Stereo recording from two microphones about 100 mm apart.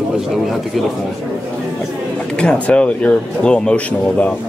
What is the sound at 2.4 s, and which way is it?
Speech, 10° left (ahead or behind).